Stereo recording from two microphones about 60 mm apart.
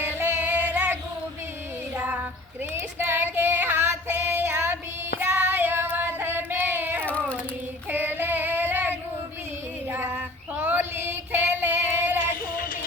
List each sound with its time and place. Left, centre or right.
0.2 s music: right
2.0 s child singing: right
3.1 s female singing: right
5.2 s child singing: right
7.9 s female singing: right
9.9 s child singing: right